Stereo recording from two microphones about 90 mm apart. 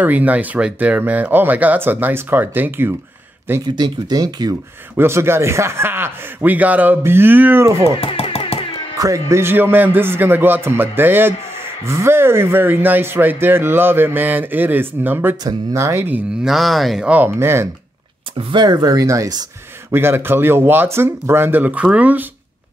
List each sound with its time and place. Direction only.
0.0 s speech: 15° right (ahead or behind)
3.6 s speech: 50° right (ahead or behind)
4.9 s speech: 30° right (ahead or behind)
8.0 s a sound: 90° left
8.9 s speech: 40° right (ahead or behind)
16.4 s speech: centre (ahead or behind)
17.0 s speech: 15° right (ahead or behind)
17.4 s speech: 30° right (ahead or behind)
18.5 s speech: 55° right (ahead or behind)
19.9 s speech: 25° right (ahead or behind)